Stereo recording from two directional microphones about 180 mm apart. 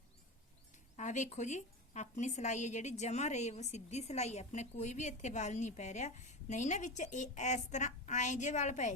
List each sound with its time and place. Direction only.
0.9 s a woman's voice: 40° left (ahead or behind)